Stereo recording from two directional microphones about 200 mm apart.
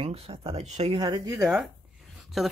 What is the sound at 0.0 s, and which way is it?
Speech, 30° right (ahead or behind).